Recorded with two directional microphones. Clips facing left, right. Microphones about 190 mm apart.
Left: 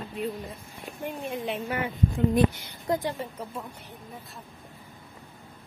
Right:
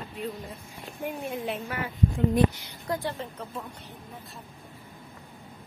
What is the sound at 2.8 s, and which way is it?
Speech, 20° left (ahead or behind).